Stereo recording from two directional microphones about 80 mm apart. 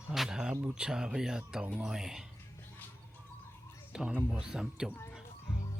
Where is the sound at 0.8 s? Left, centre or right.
Centre.